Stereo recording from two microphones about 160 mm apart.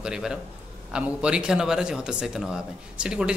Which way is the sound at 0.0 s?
5° right (ahead or behind).